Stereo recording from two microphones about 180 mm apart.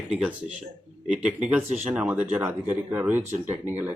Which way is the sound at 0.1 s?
5° right (ahead or behind).